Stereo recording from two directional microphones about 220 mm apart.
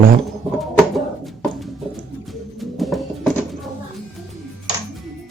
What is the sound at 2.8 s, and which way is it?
Music, centre (ahead or behind).